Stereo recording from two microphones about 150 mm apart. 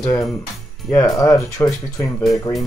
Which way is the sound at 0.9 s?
20° left (ahead or behind).